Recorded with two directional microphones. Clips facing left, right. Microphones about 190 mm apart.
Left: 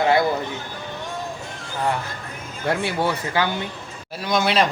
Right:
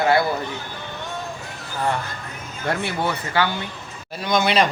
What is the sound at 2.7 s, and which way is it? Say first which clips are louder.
Speech: left 2 dB; 10° left (ahead or behind).